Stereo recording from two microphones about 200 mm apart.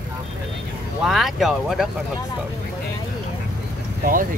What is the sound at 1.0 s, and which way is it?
Speech, centre (ahead or behind).